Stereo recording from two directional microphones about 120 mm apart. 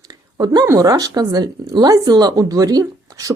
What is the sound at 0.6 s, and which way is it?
Speech, 30° right (ahead or behind).